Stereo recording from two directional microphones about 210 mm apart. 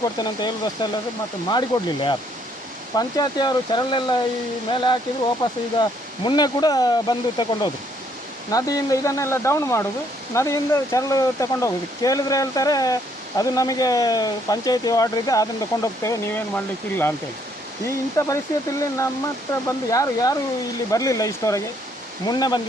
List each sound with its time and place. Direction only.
0.0 s speech: 20° left (ahead or behind)